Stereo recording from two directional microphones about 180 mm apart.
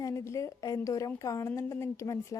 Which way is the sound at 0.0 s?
15° left (ahead or behind).